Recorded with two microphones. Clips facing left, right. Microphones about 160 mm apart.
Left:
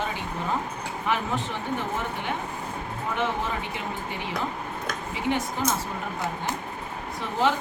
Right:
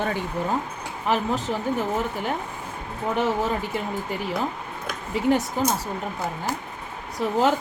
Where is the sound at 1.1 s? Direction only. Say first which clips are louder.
Right 4 dB; 40° right (ahead or behind).